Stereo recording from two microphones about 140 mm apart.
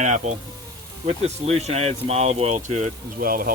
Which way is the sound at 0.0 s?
60° right (ahead or behind).